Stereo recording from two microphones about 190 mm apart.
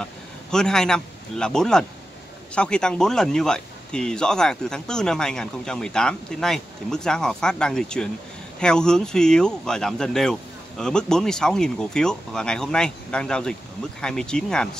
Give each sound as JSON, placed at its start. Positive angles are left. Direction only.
{"t": 0.0, "sound": "speech", "side_deg": 5}